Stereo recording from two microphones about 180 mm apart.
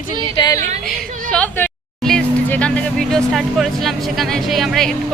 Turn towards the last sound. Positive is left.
turn(degrees=0)  # may be behind; listen again after turning